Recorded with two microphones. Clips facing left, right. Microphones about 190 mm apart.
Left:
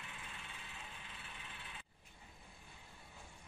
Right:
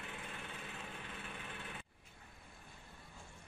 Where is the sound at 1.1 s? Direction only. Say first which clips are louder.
Right 7 dB; 55° right (ahead or behind).